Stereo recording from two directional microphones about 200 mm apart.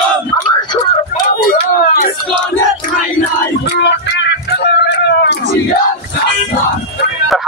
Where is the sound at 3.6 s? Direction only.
60° left (ahead or behind).